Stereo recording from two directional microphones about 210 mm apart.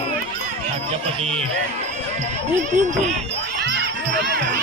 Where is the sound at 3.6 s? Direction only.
55° right (ahead or behind).